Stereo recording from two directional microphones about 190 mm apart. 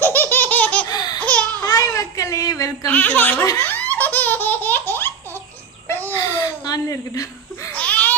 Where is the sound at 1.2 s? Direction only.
5° left (ahead or behind).